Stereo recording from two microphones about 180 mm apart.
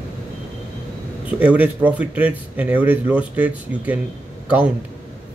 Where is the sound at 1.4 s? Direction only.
10° right (ahead or behind).